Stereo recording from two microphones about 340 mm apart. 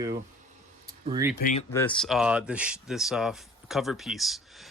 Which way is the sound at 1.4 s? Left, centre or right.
Left.